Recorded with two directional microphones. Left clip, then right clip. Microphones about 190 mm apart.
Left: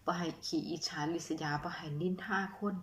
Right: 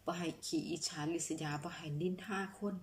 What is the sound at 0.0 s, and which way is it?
A woman's voice, 20° right (ahead or behind).